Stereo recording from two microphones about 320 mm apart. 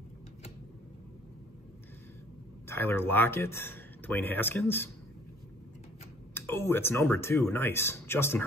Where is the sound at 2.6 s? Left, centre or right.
Centre.